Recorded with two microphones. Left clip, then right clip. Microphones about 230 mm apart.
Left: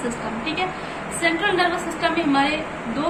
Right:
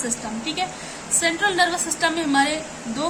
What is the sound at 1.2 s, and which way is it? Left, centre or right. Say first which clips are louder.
A woman's voice: even; right.